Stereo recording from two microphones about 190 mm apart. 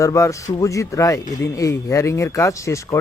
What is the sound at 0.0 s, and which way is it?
Speech, 15° left (ahead or behind).